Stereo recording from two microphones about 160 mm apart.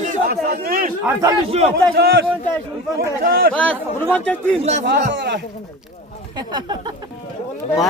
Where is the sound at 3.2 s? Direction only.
70° right (ahead or behind).